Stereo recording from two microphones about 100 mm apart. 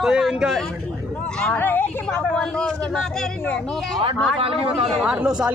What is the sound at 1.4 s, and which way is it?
Speech, 15° left (ahead or behind).